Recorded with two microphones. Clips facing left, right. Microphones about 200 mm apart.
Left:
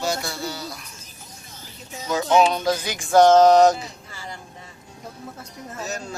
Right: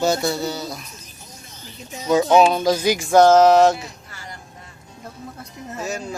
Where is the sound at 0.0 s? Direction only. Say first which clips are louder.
Right 7 dB; 25° right (ahead or behind).